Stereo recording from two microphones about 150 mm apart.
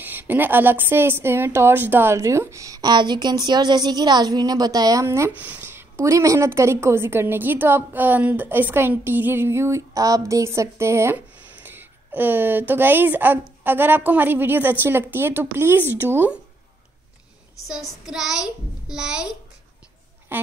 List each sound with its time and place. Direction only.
0.0 s a woman's voice: 10° right (ahead or behind)
18.0 s child singing: 5° right (ahead or behind)